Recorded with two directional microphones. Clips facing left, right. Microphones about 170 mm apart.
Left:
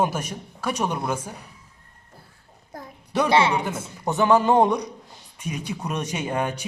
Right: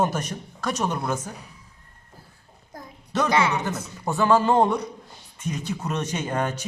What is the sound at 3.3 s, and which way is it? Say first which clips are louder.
A man's voice: left 3 dB; 30° left (ahead or behind).